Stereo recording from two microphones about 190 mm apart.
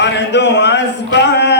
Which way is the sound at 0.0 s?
65° left (ahead or behind).